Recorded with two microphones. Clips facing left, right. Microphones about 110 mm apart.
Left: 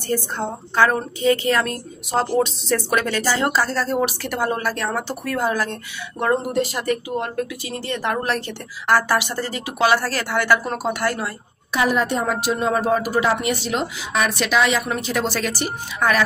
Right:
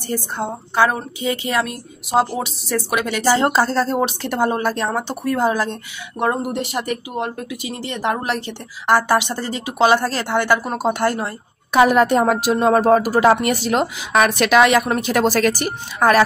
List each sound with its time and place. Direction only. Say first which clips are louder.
0.1 s a woman's voice: even; 15° right (ahead or behind)
3.3 s a woman's voice: right 4 dB; 30° right (ahead or behind)
11.7 s a woman's voice: right 7 dB; 55° right (ahead or behind); by 16.3 s 40° right (ahead or behind)